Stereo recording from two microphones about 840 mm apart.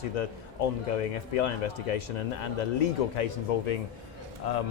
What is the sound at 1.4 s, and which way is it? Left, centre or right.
A man's voice, left.